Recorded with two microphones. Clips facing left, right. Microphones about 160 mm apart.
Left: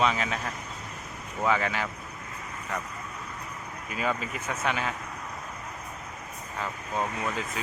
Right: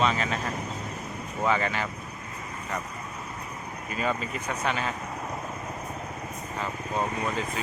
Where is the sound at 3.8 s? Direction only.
5° left (ahead or behind).